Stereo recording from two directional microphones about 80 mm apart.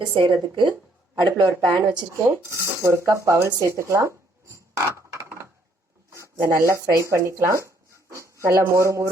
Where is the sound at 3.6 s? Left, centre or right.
Right.